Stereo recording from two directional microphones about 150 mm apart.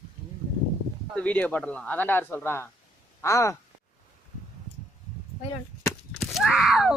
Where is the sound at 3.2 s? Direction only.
20° left (ahead or behind).